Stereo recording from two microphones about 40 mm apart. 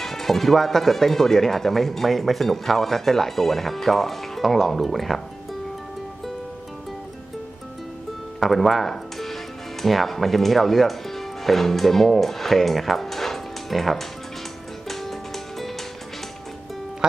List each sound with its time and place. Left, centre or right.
0.0 s speech: centre
8.4 s speech: centre
14.8 s music: centre
17.0 s music: right